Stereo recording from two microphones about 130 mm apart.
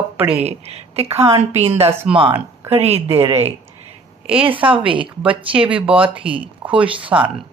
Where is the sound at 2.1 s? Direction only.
5° right (ahead or behind).